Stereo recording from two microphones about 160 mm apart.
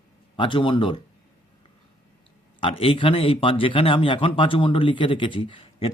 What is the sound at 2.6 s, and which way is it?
A man's voice, 35° left (ahead or behind).